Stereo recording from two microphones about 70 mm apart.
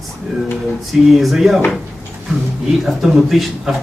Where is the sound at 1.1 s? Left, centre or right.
Centre.